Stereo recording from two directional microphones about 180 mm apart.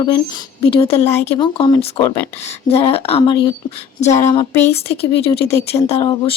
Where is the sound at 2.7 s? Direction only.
35° left (ahead or behind).